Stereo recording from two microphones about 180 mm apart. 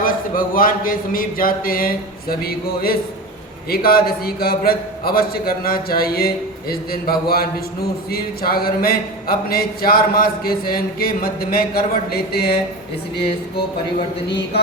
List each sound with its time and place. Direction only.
0.0 s a sound: 50° left (ahead or behind)
3.7 s a man's voice: 55° left (ahead or behind)
14.3 s a man's voice: 70° left (ahead or behind)